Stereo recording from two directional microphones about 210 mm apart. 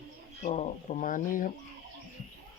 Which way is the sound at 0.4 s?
30° left (ahead or behind).